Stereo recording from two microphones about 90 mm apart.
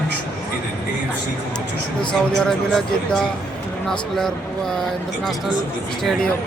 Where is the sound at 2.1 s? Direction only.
5° left (ahead or behind).